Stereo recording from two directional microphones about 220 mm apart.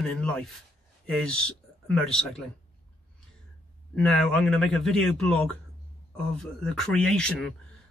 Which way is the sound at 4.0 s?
5° left (ahead or behind).